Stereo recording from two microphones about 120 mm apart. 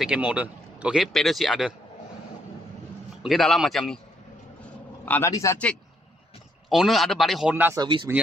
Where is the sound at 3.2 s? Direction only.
Centre (ahead or behind).